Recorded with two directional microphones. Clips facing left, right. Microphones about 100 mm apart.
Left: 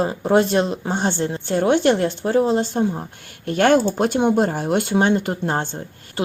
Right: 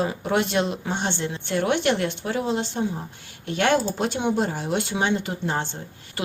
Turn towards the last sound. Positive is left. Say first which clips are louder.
# left 5 dB
turn(degrees=30)  # may be behind; listen again after turning